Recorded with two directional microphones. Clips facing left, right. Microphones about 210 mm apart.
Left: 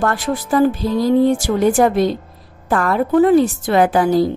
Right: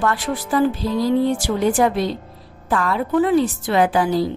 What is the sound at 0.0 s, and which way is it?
Speech, 45° left (ahead or behind).